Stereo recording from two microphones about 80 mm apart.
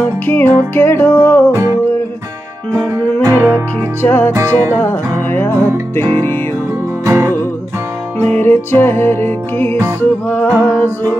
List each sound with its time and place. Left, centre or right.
0.0 s music: left
1.5 s music: right
3.3 s music: right
4.0 s music: left
4.4 s music: right
5.3 s music: left
7.1 s music: right
8.2 s music: left
9.8 s music: right
10.2 s music: left